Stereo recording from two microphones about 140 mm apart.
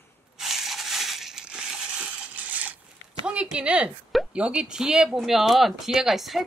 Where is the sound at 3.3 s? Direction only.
10° right (ahead or behind).